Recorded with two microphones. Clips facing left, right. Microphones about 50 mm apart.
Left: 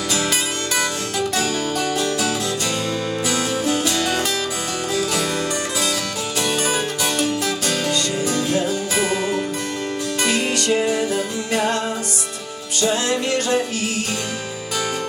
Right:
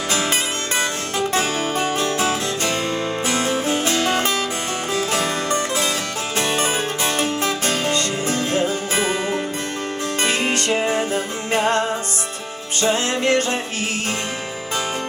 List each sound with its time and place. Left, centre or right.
0.1 s music: right
12.8 s music: right